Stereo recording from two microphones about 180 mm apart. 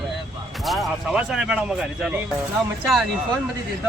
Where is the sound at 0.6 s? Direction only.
Centre (ahead or behind).